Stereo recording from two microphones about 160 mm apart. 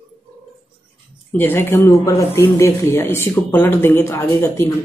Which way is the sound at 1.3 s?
10° left (ahead or behind).